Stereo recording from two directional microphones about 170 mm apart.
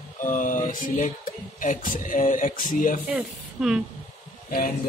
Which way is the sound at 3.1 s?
5° right (ahead or behind).